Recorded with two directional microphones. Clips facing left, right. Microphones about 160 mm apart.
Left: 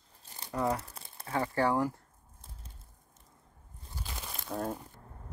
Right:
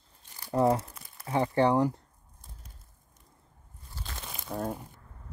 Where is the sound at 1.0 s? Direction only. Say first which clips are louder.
Left 1 dB; 30° left (ahead or behind).